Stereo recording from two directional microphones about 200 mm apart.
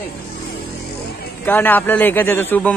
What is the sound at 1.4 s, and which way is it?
A man's voice, 10° left (ahead or behind).